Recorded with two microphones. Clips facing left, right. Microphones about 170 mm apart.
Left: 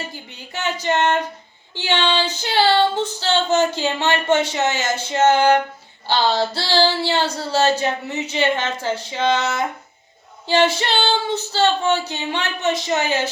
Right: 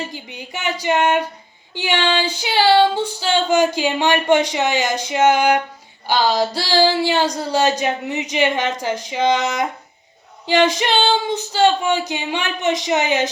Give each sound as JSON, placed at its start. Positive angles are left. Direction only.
{"t": 0.0, "sound": "female singing", "side_deg": -15}